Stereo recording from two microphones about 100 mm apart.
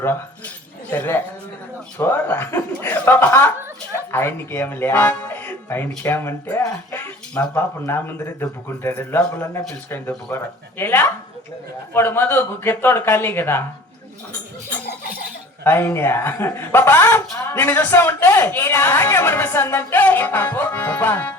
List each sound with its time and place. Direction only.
0.9 s a man's voice: 20° left (ahead or behind)
6.6 s a man's voice: 35° left (ahead or behind)
15.6 s a man's voice: 20° left (ahead or behind)